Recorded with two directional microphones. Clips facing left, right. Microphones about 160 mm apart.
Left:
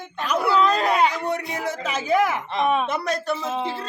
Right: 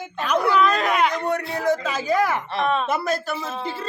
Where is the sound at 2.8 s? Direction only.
Centre (ahead or behind).